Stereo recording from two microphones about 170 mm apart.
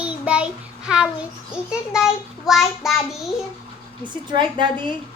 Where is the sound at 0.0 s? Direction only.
5° right (ahead or behind).